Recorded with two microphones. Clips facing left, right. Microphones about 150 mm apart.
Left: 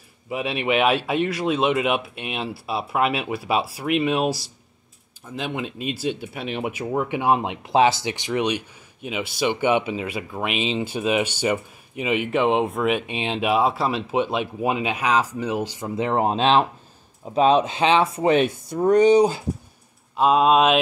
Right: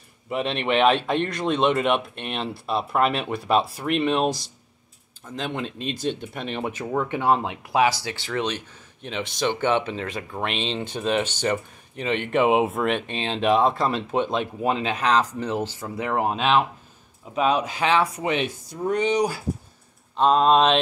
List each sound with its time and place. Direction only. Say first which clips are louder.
0.3 s speech: left 1 dB; 5° left (ahead or behind); by 18.3 s 25° left (ahead or behind)
18.3 s speech: left 7 dB; 50° left (ahead or behind)
19.1 s speech: left 6 dB; 20° left (ahead or behind)
20.2 s speech: left 1 dB; 5° left (ahead or behind)